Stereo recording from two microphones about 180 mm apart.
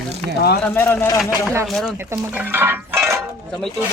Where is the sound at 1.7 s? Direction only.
Centre (ahead or behind).